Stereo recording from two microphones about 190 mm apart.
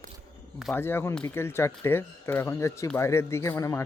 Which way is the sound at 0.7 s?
10° left (ahead or behind).